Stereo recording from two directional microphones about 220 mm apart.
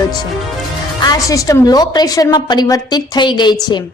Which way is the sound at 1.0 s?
15° left (ahead or behind).